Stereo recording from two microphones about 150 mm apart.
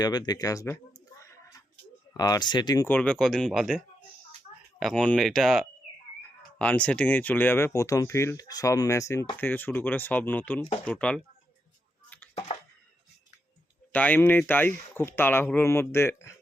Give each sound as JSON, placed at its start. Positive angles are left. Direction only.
{"t": 0.0, "sound": "speech", "side_deg": 30}
{"t": 1.2, "sound": "a sound", "side_deg": 20}
{"t": 2.1, "sound": "speech", "side_deg": 25}
{"t": 2.8, "sound": "speech", "side_deg": 10}
{"t": 12.3, "sound": "a sound", "side_deg": 45}
{"t": 13.9, "sound": "speech", "side_deg": 10}